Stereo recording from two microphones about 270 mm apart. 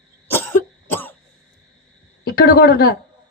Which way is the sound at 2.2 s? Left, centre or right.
Left.